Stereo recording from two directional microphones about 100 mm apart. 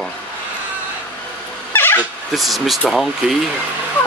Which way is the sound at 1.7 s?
20° left (ahead or behind).